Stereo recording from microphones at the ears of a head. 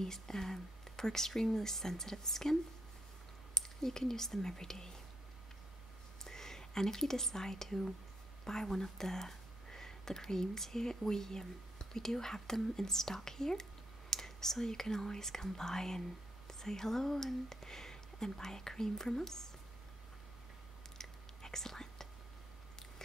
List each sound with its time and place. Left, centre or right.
0.0 s speech: centre
3.5 s speech: centre
6.2 s speech: centre
21.4 s whispering: centre